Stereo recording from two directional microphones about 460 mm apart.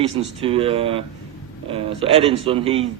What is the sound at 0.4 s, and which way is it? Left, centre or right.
Speech, centre.